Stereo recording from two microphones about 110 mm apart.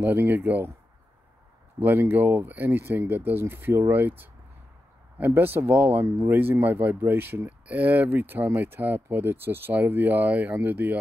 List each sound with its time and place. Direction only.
0.0 s speech: 15° right (ahead or behind)
1.8 s speech: 20° right (ahead or behind)
5.2 s speech: 20° right (ahead or behind)